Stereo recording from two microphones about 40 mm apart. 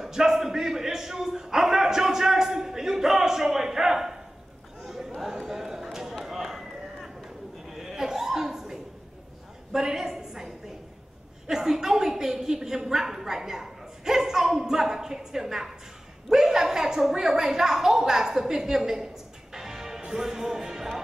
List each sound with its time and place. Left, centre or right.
0.0 s a sound: centre
0.4 s a man's voice: centre
5.2 s a sound: centre
7.7 s chuckle: centre
9.7 s a sound: centre
12.3 s a man's voice: centre
17.5 s a man's voice: centre
19.5 s music: centre
20.1 s speech: centre